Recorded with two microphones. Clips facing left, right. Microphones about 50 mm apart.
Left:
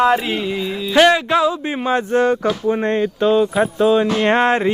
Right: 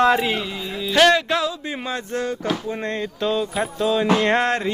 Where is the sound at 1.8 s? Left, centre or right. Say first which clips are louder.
Left 11 dB; left.